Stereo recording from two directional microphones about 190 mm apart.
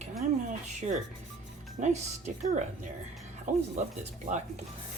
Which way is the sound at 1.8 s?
40° right (ahead or behind).